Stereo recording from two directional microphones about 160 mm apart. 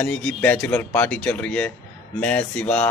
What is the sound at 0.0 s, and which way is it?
Speech, 5° left (ahead or behind).